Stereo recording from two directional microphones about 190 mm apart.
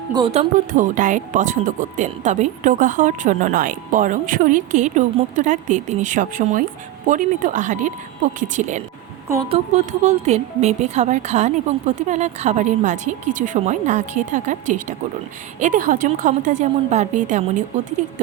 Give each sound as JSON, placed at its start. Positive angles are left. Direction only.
{"t": 0.1, "sound": "a woman's voice", "side_deg": -30}